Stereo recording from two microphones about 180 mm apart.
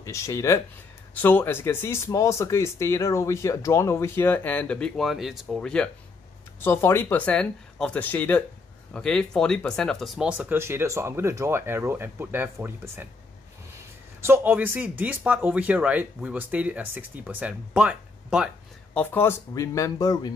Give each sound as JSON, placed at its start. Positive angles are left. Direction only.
{"t": 0.0, "sound": "speech", "side_deg": 15}
{"t": 14.2, "sound": "speech", "side_deg": -10}
{"t": 18.9, "sound": "speech", "side_deg": 10}